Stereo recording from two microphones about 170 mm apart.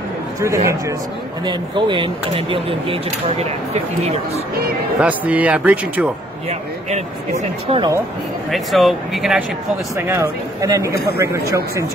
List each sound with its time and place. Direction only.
0.4 s speech: 15° right (ahead or behind); by 3.4 s 35° right (ahead or behind)
5.0 s speech: 10° right (ahead or behind)
6.9 s speech: 40° right (ahead or behind)
8.5 s speech: centre (ahead or behind)
9.9 s speech: 15° right (ahead or behind)